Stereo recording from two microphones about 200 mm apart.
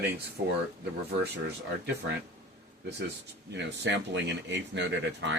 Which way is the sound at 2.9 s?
55° right (ahead or behind).